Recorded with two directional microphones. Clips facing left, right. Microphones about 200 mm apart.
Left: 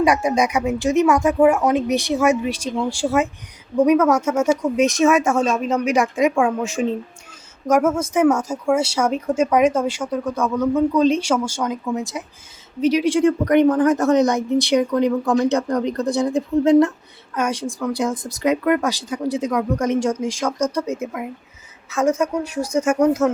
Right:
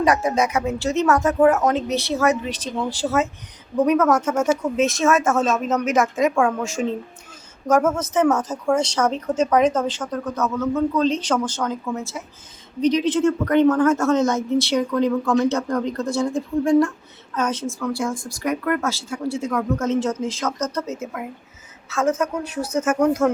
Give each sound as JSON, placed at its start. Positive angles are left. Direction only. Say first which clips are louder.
{"t": 0.0, "sound": "speech", "louder": "left 2 dB", "side_deg": 15}